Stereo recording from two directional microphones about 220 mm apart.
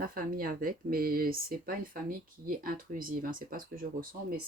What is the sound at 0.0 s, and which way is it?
Speech, 40° right (ahead or behind).